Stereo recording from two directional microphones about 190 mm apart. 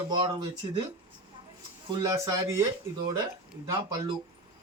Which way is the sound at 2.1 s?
15° right (ahead or behind).